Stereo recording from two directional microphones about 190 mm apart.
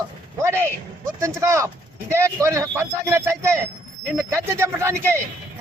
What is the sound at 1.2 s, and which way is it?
Speech, 15° right (ahead or behind).